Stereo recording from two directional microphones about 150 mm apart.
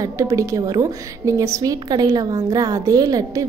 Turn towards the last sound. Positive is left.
turn(degrees=-25)  # may be behind; listen again after turning